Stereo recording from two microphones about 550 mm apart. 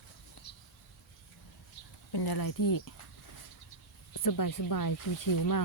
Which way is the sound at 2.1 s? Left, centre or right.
Left.